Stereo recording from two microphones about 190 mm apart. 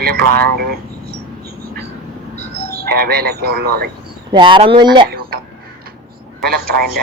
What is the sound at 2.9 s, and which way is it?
Speech, 55° right (ahead or behind).